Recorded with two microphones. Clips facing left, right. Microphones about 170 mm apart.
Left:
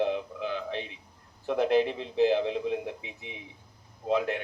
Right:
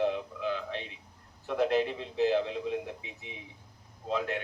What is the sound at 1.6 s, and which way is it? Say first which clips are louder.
Speech: left 3 dB; 30° left (ahead or behind).